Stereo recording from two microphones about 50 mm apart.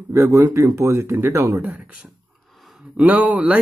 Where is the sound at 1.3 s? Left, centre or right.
Right.